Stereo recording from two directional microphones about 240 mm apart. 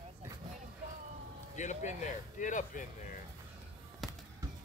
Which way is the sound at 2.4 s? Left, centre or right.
Left.